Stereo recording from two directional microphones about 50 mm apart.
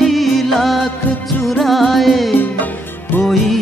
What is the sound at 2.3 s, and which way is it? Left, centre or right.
Music, left.